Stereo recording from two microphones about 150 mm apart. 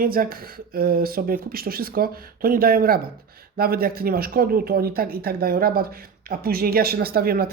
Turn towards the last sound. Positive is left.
turn(degrees=-85)